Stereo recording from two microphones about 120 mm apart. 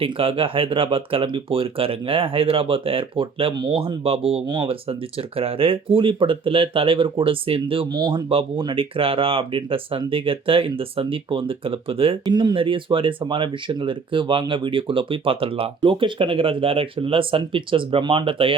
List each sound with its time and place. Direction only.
0.0 s speech: 50° right (ahead or behind)
7.9 s speech: 35° right (ahead or behind)
8.3 s speech: 50° right (ahead or behind)
12.2 s speech: 35° right (ahead or behind)